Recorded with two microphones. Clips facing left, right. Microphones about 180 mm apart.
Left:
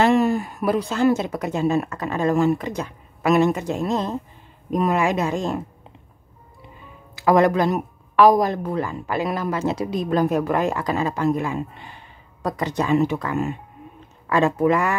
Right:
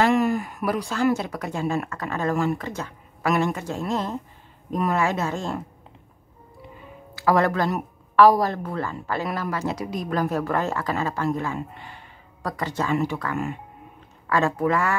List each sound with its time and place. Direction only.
0.0 s speech: 25° left (ahead or behind)
7.2 s speech: 20° left (ahead or behind)